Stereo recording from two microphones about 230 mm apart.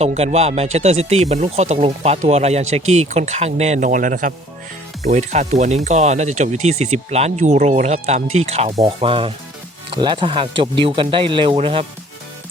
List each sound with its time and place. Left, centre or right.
0.0 s speech: right